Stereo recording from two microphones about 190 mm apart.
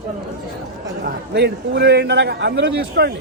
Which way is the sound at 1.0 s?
60° right (ahead or behind).